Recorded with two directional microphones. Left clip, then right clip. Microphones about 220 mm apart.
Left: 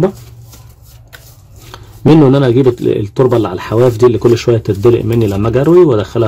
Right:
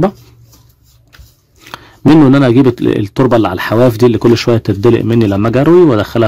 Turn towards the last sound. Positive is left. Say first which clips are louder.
# even
turn(degrees=-35)  # may be behind; listen again after turning